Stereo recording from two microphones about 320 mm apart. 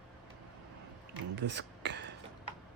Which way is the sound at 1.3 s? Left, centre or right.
Right.